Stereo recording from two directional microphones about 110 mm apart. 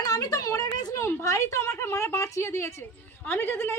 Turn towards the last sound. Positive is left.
turn(degrees=20)  # may be behind; listen again after turning